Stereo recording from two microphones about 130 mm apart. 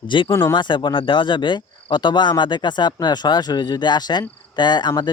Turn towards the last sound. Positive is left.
turn(degrees=35)  # may be behind; listen again after turning